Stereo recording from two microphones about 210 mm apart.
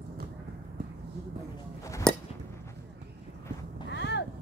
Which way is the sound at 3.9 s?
55° left (ahead or behind).